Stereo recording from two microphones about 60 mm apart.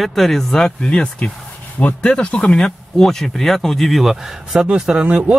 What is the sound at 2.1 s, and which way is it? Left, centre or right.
A man's voice, left.